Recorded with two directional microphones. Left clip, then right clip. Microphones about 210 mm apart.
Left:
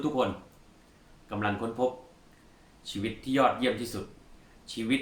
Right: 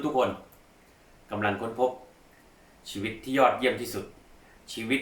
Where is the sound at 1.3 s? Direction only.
15° left (ahead or behind).